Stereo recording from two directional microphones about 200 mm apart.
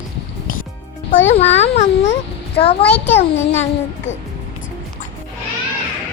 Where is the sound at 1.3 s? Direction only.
35° left (ahead or behind).